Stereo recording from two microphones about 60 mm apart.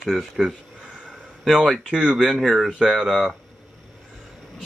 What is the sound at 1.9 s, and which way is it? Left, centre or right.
Speech, centre.